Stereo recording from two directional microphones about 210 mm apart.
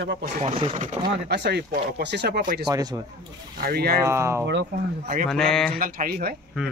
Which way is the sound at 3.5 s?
45° right (ahead or behind).